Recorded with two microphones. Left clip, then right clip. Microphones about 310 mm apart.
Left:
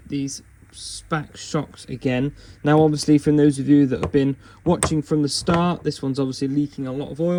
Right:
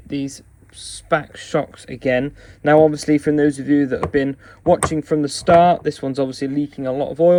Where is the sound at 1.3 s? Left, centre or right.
Centre.